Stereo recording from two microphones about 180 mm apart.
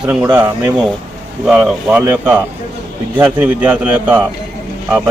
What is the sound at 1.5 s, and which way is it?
A man's voice, 5° right (ahead or behind).